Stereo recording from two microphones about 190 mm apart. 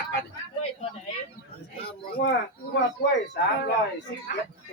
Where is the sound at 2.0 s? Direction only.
55° left (ahead or behind).